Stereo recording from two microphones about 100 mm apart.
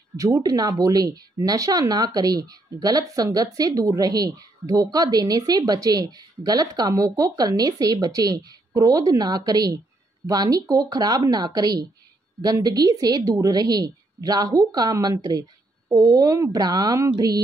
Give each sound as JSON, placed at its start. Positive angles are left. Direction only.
{"t": 0.2, "sound": "speech", "side_deg": -35}